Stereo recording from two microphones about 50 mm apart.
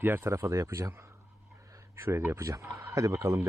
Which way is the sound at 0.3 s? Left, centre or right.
Right.